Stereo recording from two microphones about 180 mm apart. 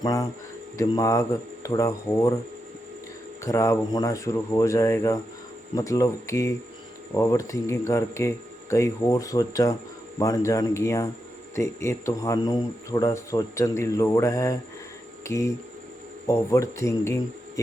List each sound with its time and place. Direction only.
0.0 s speech: 20° left (ahead or behind)
3.4 s speech: 15° left (ahead or behind)